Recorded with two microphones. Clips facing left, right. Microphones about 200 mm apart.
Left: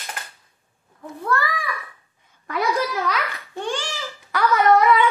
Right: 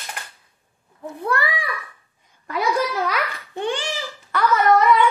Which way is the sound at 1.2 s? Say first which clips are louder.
Even; 15° right (ahead or behind).